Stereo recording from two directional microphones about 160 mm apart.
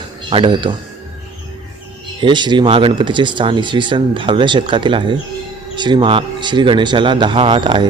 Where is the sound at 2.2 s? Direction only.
30° right (ahead or behind).